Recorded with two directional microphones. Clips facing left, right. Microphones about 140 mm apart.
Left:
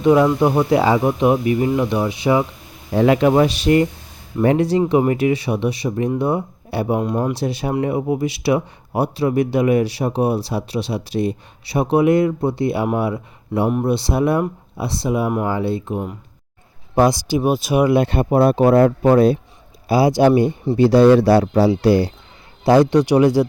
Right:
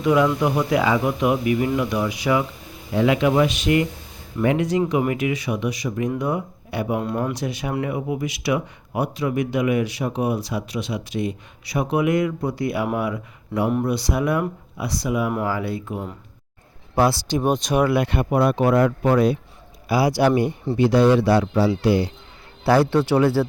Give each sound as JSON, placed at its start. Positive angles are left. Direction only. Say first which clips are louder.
{"t": 0.0, "sound": "speech", "louder": "left 5 dB", "side_deg": 30}
{"t": 2.9, "sound": "speech", "louder": "left 4 dB", "side_deg": 40}
{"t": 17.9, "sound": "speech", "louder": "left 5 dB", "side_deg": 30}
{"t": 22.6, "sound": "speech", "louder": "left 4 dB", "side_deg": 20}